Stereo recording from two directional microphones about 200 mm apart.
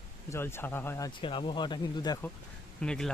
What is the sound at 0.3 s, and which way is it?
Speech, 10° left (ahead or behind).